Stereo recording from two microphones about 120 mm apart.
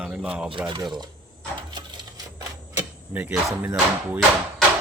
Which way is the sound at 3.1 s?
15° right (ahead or behind).